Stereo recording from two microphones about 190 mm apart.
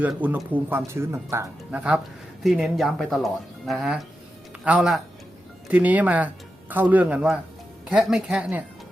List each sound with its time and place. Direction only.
0.0 s speech: 10° right (ahead or behind)